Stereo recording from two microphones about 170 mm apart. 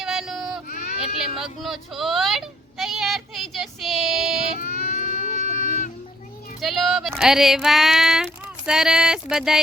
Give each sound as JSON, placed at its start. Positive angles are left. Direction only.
{"t": 0.0, "sound": "child singing", "side_deg": 0}
{"t": 1.2, "sound": "speech", "side_deg": 0}
{"t": 4.6, "sound": "baby cry", "side_deg": 55}
{"t": 5.5, "sound": "music", "side_deg": 50}
{"t": 6.6, "sound": "a sound", "side_deg": 0}